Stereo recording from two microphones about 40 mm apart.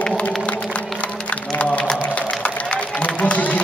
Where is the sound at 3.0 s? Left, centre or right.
Left.